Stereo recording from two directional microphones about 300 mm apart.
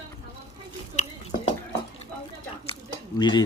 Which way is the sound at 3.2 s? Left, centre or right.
Centre.